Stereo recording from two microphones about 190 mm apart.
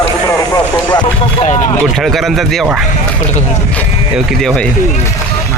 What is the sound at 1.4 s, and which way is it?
Vehicle, 35° left (ahead or behind).